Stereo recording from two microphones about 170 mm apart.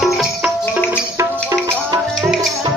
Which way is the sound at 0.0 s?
5° right (ahead or behind).